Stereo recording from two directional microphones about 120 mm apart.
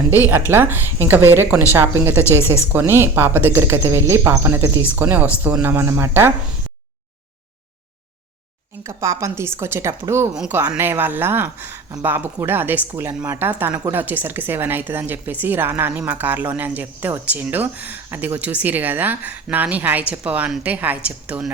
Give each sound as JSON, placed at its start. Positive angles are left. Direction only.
{"t": 0.3, "sound": "a woman's voice", "side_deg": -20}
{"t": 4.9, "sound": "a woman's voice", "side_deg": -15}
{"t": 8.8, "sound": "a woman's voice", "side_deg": -25}